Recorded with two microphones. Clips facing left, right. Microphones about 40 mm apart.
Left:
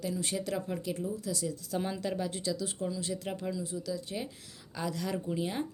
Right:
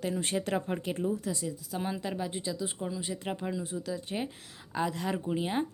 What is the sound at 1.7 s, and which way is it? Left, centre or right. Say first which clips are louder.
A woman's voice: left 1 dB; centre.